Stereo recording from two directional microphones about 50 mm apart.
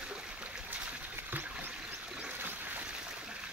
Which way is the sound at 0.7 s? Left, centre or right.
Right.